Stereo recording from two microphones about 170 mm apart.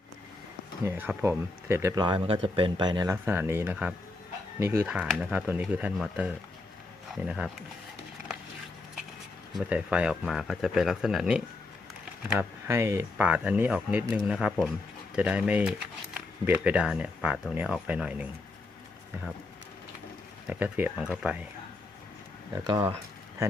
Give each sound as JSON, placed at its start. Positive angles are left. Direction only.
{"t": 0.9, "sound": "speech", "side_deg": -15}
{"t": 2.0, "sound": "speech", "side_deg": -30}
{"t": 9.6, "sound": "speech", "side_deg": -5}
{"t": 20.5, "sound": "speech", "side_deg": -10}
{"t": 22.6, "sound": "speech", "side_deg": -25}